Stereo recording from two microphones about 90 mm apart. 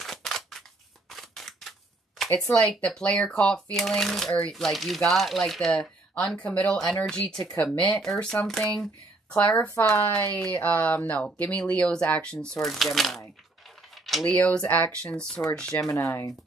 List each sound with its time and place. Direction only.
0.0 s a sound: 5° left (ahead or behind)
2.8 s speech: 10° left (ahead or behind)
9.8 s speech: 30° left (ahead or behind)
10.3 s speech: 20° left (ahead or behind); by 13.2 s centre (ahead or behind)
14.2 s speech: 15° left (ahead or behind)
15.9 s speech: 35° left (ahead or behind)